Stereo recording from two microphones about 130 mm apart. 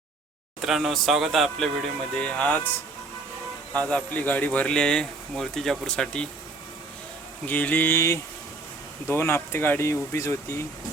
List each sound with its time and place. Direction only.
0.6 s speech: centre (ahead or behind)
3.8 s speech: 10° left (ahead or behind)
7.4 s speech: 15° left (ahead or behind)